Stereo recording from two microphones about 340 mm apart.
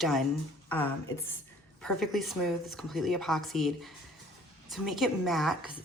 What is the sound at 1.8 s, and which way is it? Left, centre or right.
A woman's voice, centre.